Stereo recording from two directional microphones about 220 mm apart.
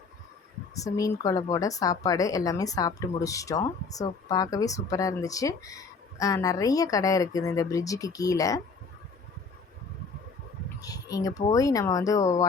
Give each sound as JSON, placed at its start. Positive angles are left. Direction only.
{"t": 0.7, "sound": "speech", "side_deg": 15}
{"t": 10.8, "sound": "speech", "side_deg": 15}